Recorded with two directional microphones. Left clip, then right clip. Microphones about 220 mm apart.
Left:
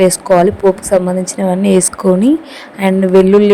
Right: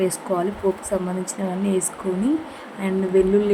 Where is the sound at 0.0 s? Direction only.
35° left (ahead or behind).